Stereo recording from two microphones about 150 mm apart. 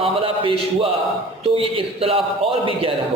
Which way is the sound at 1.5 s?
40° right (ahead or behind).